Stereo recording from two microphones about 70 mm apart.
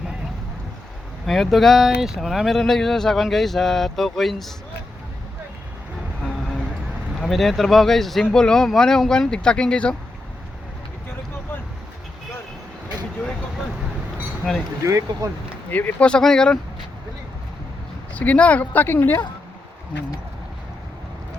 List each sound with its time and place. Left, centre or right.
1.3 s speech: centre
7.2 s speech: centre
14.8 s speech: right
15.7 s speech: left
18.1 s speech: left